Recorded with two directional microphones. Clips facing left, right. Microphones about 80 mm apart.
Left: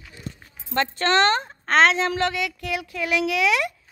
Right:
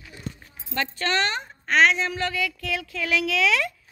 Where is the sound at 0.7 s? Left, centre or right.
Left.